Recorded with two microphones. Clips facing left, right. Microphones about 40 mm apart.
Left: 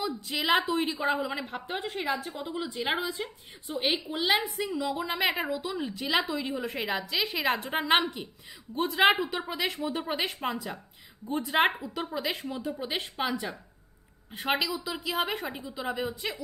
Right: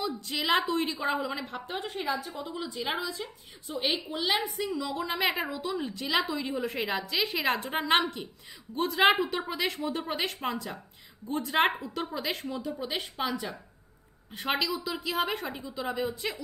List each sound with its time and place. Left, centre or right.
0.0 s a woman's voice: centre
1.9 s a woman's voice: left
2.3 s a woman's voice: centre